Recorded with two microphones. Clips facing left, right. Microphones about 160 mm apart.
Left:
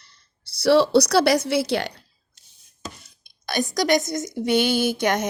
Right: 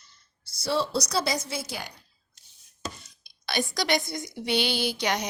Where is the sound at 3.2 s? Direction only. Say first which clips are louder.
Left 4 dB; 45° left (ahead or behind).